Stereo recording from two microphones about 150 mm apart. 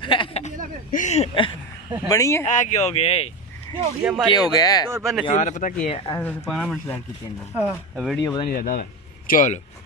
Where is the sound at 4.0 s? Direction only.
5° right (ahead or behind).